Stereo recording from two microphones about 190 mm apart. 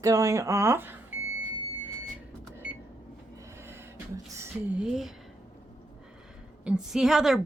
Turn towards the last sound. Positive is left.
turn(degrees=0)  # may be behind; listen again after turning